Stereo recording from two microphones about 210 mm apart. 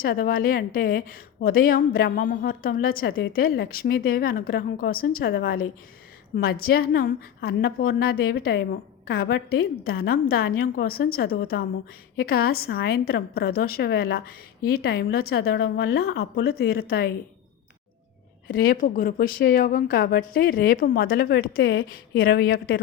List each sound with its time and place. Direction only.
0.0 s a woman's voice: 45° left (ahead or behind)
18.4 s a woman's voice: 45° left (ahead or behind)